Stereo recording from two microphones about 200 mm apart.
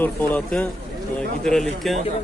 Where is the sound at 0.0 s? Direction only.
10° left (ahead or behind).